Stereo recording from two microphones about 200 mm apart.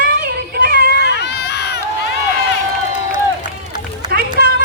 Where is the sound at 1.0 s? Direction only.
55° left (ahead or behind).